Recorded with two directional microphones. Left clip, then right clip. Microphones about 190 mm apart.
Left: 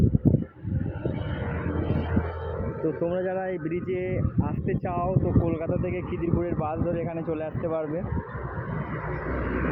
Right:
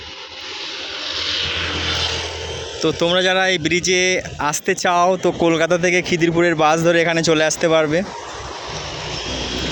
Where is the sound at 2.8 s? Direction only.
40° right (ahead or behind); by 8.0 s 60° right (ahead or behind).